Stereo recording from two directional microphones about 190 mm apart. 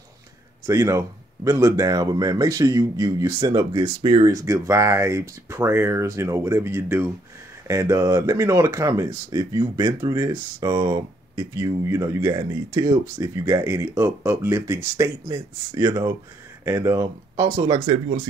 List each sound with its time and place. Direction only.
0.7 s speech: 15° right (ahead or behind)